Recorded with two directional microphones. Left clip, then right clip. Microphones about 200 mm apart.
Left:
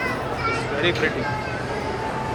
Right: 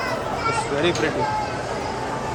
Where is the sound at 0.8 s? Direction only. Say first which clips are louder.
Left 1 dB; 20° right (ahead or behind).